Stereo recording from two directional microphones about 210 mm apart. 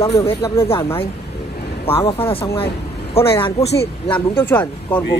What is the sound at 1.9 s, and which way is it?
A man's voice, 25° left (ahead or behind).